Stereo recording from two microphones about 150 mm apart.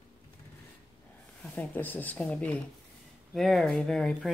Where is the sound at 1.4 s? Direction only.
10° left (ahead or behind).